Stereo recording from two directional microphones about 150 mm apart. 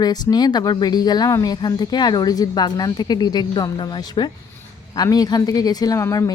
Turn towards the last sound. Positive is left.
turn(degrees=20)  # may be behind; listen again after turning